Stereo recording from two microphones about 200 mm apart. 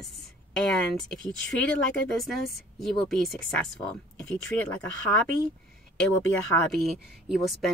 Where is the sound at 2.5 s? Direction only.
Centre (ahead or behind).